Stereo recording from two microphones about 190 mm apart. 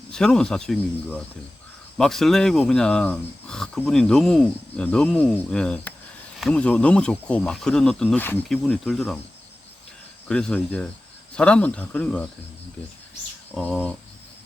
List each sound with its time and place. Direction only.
0.1 s speech: 5° left (ahead or behind)
8.6 s speech: centre (ahead or behind)
10.2 s speech: 5° left (ahead or behind)
13.5 s speech: 5° left (ahead or behind)